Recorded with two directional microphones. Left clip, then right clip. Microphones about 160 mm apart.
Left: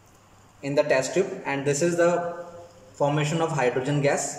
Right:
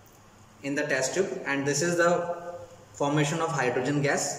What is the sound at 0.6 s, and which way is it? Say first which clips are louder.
A man's voice: left 5 dB; 30° left (ahead or behind).